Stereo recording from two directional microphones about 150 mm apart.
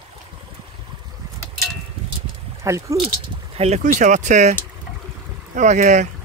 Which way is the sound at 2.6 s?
20° right (ahead or behind).